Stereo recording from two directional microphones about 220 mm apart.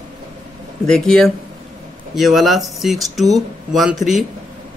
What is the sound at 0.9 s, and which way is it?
A man's voice, 5° left (ahead or behind).